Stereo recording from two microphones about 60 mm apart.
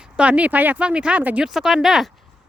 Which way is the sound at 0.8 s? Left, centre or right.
Centre.